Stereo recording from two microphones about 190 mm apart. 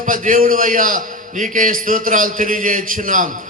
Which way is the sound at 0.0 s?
45° right (ahead or behind).